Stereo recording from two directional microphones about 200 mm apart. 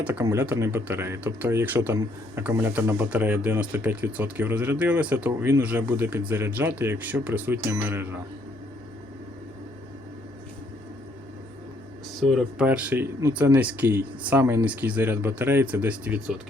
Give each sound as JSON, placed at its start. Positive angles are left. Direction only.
{"t": 0.0, "sound": "speech", "side_deg": -10}
{"t": 12.3, "sound": "speech", "side_deg": -5}